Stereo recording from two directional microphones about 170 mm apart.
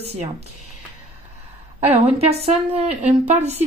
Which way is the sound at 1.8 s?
35° right (ahead or behind).